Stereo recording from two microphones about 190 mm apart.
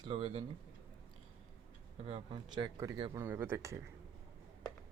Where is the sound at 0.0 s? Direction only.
25° right (ahead or behind).